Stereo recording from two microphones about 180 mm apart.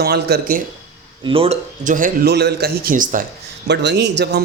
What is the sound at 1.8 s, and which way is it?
Speech, 45° right (ahead or behind).